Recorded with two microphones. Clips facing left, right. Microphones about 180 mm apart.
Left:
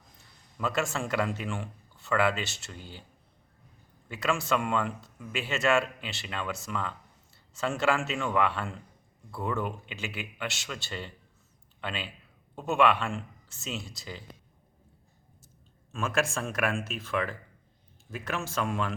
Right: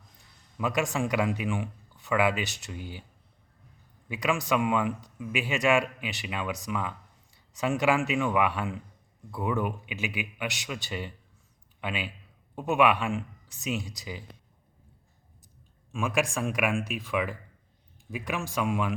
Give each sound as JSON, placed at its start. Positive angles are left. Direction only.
{"t": 0.6, "sound": "a man's voice", "side_deg": -15}
{"t": 4.1, "sound": "a man's voice", "side_deg": -15}
{"t": 15.9, "sound": "a man's voice", "side_deg": -15}